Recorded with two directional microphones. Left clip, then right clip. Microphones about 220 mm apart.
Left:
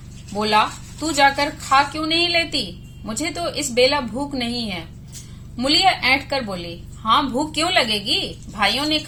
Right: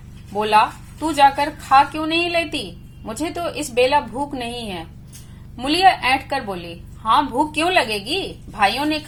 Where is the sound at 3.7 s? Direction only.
20° right (ahead or behind).